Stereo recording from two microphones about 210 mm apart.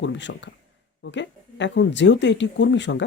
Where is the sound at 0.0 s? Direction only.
55° left (ahead or behind).